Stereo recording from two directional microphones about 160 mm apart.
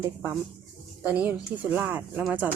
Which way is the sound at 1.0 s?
5° right (ahead or behind).